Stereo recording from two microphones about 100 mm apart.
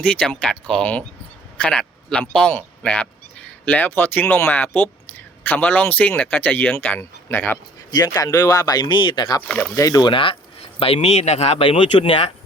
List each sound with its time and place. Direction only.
0.0 s speech: 10° left (ahead or behind)
1.5 s a sound: 10° left (ahead or behind)
2.3 s speech: 10° left (ahead or behind)
7.9 s speech: 40° left (ahead or behind)
9.5 s speech: 10° left (ahead or behind)
9.7 s speech: 35° left (ahead or behind)
10.1 s speech: 60° left (ahead or behind)